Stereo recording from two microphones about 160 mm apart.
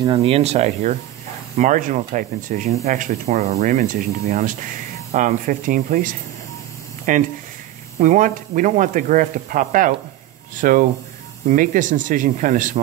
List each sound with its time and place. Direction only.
0.0 s speech: 35° right (ahead or behind); by 12.8 s 55° right (ahead or behind)